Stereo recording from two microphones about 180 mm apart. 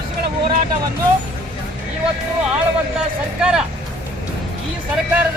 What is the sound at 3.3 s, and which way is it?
Speech, 5° right (ahead or behind).